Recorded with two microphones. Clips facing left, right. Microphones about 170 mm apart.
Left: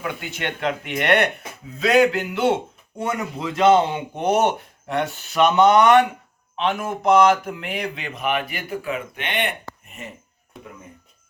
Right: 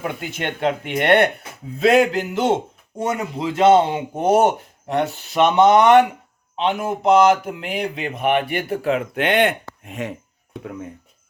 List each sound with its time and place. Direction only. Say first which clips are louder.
0.0 s speech: right 2 dB; 35° right (ahead or behind)
8.2 s speech: right 5 dB; 60° right (ahead or behind); by 10.2 s 90° right